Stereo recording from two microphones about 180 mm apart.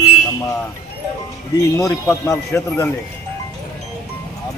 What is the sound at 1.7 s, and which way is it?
A man's voice, 15° left (ahead or behind).